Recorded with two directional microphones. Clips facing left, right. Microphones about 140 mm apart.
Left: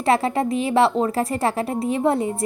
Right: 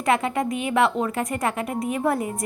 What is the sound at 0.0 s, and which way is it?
A woman's voice, 35° left (ahead or behind).